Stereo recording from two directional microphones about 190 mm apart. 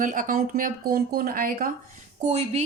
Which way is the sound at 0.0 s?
45° right (ahead or behind).